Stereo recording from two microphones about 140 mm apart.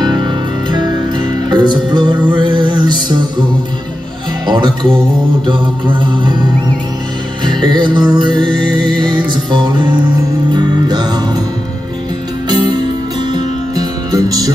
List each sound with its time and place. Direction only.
0.0 s music: 35° right (ahead or behind)
4.5 s music: 35° right (ahead or behind)
7.4 s music: 35° right (ahead or behind)
12.4 s music: 30° right (ahead or behind)